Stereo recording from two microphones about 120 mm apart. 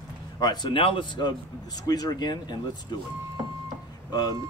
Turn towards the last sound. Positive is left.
turn(degrees=35)  # may be behind; listen again after turning